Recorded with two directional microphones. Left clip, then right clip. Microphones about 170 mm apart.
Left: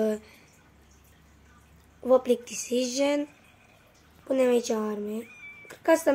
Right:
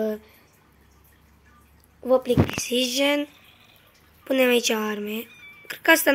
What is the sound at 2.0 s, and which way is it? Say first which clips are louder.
Speech: right 2 dB; centre (ahead or behind).